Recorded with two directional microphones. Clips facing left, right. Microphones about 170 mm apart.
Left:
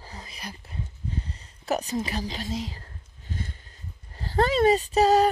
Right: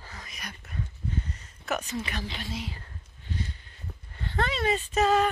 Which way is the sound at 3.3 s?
50° left (ahead or behind).